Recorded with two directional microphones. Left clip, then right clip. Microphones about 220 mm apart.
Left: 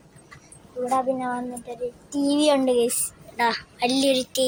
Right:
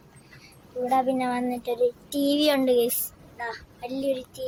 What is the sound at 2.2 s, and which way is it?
Speech, centre (ahead or behind).